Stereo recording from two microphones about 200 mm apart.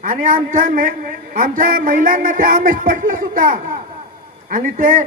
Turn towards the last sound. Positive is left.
turn(degrees=-40)  # may be behind; listen again after turning